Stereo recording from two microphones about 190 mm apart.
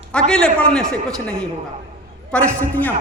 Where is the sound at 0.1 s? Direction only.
5° left (ahead or behind).